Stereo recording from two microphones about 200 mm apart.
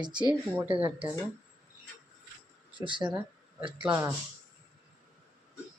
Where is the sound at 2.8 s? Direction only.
25° right (ahead or behind).